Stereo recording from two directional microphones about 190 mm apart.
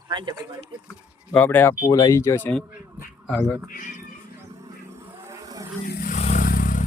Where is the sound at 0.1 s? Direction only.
25° right (ahead or behind).